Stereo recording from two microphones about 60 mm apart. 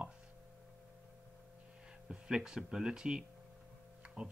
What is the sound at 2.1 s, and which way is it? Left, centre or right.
Speech, centre.